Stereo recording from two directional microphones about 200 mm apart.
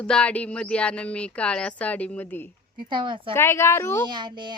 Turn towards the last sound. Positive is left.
turn(degrees=-20)  # may be behind; listen again after turning